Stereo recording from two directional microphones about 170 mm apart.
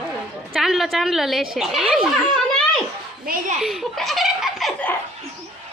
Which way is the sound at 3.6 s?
Centre (ahead or behind).